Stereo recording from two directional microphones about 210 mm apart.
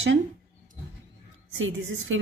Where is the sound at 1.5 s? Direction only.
65° right (ahead or behind).